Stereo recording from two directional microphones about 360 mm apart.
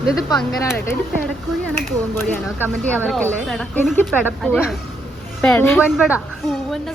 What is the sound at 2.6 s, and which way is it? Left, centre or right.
Speech, centre.